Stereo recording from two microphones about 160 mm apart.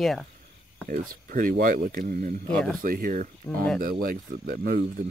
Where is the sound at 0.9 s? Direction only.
60° right (ahead or behind).